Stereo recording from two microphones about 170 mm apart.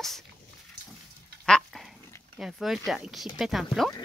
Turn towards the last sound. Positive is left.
turn(degrees=0)  # may be behind; listen again after turning